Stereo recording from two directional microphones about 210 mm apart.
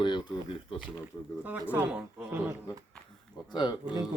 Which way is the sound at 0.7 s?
5° right (ahead or behind).